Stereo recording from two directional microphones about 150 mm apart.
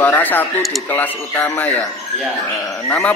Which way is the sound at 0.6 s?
Centre (ahead or behind).